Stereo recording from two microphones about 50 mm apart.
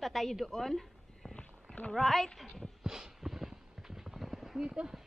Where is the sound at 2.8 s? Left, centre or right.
Centre.